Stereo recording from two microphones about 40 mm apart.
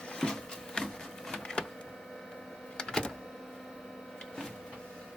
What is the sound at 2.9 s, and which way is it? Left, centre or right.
Printer, centre.